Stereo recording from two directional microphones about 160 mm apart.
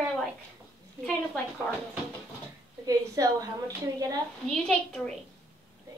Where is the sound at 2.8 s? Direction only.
20° right (ahead or behind).